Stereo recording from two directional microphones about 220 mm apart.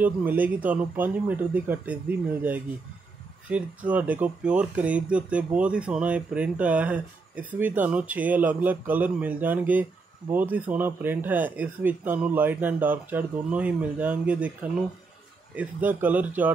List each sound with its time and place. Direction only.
0.0 s speech: 10° right (ahead or behind)